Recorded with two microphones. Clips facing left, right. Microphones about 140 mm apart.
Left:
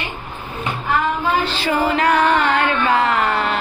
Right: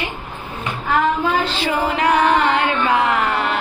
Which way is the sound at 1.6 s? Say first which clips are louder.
Left 1 dB; 20° right (ahead or behind).